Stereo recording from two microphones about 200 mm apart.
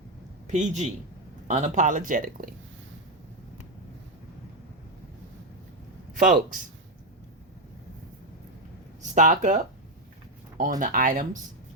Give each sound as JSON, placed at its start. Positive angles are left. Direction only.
{"t": 0.4, "sound": "a man's voice", "side_deg": -35}
{"t": 6.1, "sound": "speech", "side_deg": -45}
{"t": 9.1, "sound": "speech", "side_deg": -40}
{"t": 10.8, "sound": "speech", "side_deg": -45}